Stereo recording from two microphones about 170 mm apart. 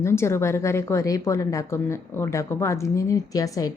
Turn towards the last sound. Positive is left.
turn(degrees=20)  # may be behind; listen again after turning